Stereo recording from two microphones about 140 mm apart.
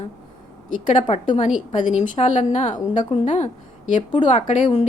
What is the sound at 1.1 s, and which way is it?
A woman's voice, 50° left (ahead or behind).